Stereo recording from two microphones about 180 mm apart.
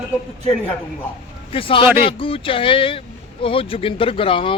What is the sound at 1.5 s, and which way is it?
A man's voice, 30° left (ahead or behind).